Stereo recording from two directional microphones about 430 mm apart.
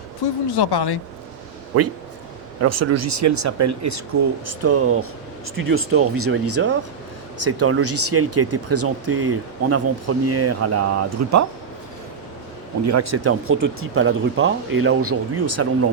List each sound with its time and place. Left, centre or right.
0.5 s speech: left
1.7 s speech: right
12.8 s speech: right